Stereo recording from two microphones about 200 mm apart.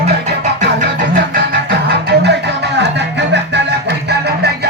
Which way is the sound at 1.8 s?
55° right (ahead or behind).